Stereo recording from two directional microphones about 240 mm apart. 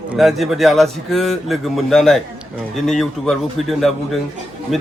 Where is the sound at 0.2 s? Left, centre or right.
Centre.